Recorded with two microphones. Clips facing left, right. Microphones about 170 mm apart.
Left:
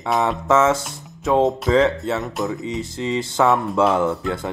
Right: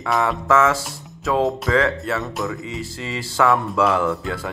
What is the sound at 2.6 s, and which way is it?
Speech, 20° left (ahead or behind).